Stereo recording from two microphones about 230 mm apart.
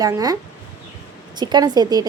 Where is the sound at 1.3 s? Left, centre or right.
Centre.